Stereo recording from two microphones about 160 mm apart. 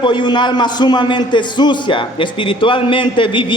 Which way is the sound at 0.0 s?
30° left (ahead or behind).